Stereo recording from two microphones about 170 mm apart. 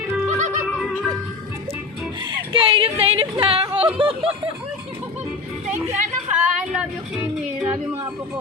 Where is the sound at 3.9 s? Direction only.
30° right (ahead or behind).